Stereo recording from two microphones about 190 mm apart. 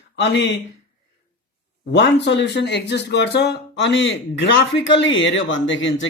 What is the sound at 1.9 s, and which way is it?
Speech, 65° left (ahead or behind).